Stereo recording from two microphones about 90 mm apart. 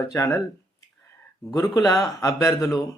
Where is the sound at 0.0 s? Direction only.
35° left (ahead or behind).